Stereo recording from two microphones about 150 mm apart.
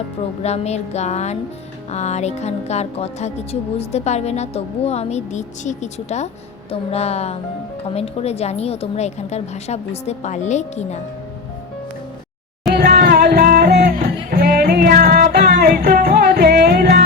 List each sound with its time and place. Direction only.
0.4 s a woman's voice: 45° left (ahead or behind)
12.7 s music: 90° right